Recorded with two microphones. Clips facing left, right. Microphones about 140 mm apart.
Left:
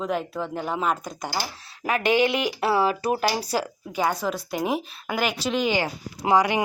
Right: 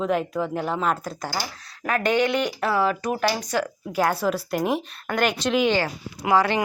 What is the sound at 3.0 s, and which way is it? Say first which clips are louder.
Speech: left 1 dB; 30° left (ahead or behind).